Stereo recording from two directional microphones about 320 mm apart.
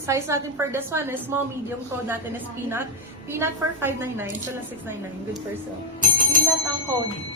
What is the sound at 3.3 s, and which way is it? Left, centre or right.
Speech, centre.